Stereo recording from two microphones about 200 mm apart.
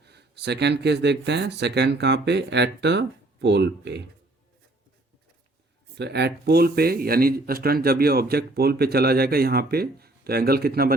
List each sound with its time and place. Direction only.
0.0 s speech: 55° right (ahead or behind)
6.0 s speech: 55° right (ahead or behind)